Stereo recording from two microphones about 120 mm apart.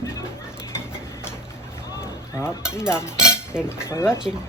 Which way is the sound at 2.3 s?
25° left (ahead or behind).